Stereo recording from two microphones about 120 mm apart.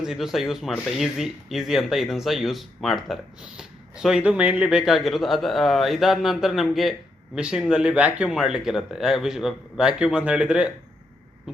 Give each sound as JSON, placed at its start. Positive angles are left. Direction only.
{"t": 0.0, "sound": "speech", "side_deg": -5}